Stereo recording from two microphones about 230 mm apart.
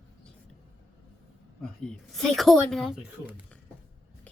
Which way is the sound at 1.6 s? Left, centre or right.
Centre.